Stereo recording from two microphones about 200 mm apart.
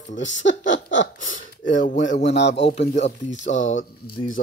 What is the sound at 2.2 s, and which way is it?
Speech, 60° left (ahead or behind).